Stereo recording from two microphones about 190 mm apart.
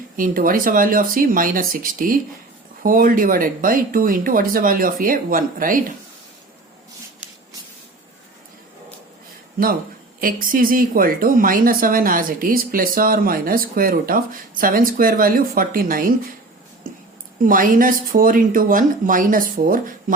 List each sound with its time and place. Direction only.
0.2 s speech: 45° right (ahead or behind)
10.2 s speech: 45° right (ahead or behind)
17.4 s speech: 45° right (ahead or behind)